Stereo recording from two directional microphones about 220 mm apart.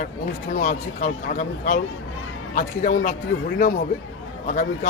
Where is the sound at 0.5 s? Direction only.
35° left (ahead or behind).